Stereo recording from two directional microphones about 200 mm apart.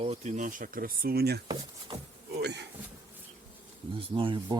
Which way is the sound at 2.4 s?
60° right (ahead or behind).